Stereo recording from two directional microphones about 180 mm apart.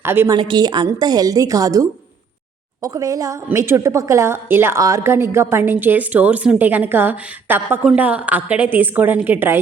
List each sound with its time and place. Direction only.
0.0 s a woman's voice: 15° right (ahead or behind)
0.3 s a woman's voice: 25° right (ahead or behind)